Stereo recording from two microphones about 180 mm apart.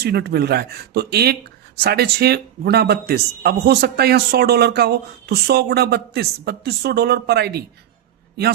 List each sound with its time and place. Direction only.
0.0 s speech: 65° right (ahead or behind)